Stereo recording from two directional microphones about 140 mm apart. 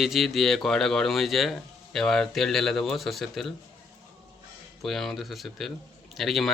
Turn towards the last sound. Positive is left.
turn(degrees=0)  # may be behind; listen again after turning